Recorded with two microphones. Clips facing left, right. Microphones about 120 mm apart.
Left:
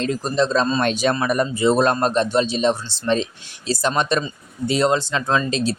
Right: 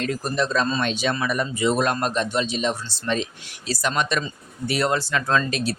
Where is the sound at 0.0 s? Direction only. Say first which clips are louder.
Left 4 dB; 25° left (ahead or behind).